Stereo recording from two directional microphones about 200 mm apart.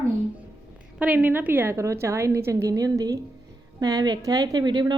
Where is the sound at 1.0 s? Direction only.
10° right (ahead or behind).